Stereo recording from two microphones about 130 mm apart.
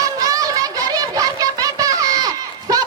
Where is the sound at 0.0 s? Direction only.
25° right (ahead or behind).